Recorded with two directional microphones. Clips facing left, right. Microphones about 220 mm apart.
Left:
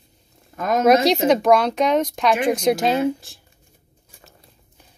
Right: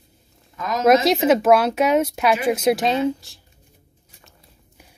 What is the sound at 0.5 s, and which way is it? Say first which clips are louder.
Speech: left 5 dB; 50° left (ahead or behind).